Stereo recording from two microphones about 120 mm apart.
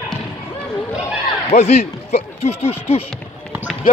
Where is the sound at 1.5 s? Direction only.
65° left (ahead or behind).